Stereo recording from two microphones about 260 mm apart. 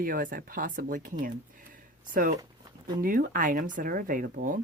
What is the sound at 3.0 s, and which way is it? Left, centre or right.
Speech, right.